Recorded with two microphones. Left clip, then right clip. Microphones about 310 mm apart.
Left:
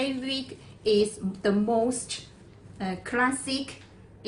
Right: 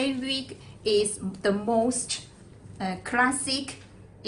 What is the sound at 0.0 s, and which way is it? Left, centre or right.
A woman's voice, right.